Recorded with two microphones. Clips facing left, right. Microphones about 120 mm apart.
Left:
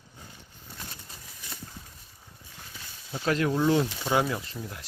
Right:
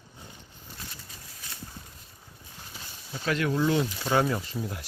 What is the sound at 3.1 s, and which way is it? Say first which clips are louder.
Speech: left 2 dB; 35° left (ahead or behind).